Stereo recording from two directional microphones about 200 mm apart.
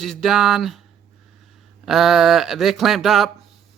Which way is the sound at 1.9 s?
Centre (ahead or behind).